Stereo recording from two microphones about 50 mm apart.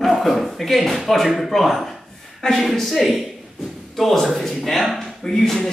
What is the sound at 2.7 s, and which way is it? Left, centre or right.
Speech, centre.